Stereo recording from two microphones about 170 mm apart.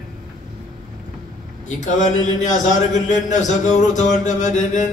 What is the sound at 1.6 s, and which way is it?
Speech, 45° left (ahead or behind).